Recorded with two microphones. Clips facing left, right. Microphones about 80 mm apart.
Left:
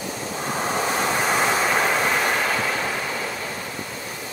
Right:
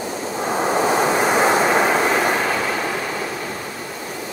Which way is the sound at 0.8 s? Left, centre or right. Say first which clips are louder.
Right 5 dB; right.